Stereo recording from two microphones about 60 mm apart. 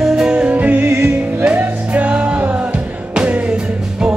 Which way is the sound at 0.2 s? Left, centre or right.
Centre.